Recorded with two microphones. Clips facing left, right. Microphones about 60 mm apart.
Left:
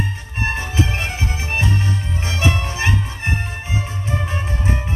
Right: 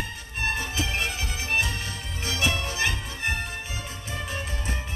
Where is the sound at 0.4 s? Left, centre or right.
Left.